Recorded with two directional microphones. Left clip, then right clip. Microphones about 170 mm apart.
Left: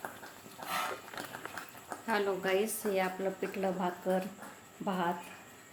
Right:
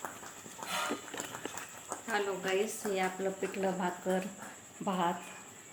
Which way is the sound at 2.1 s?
30° left (ahead or behind).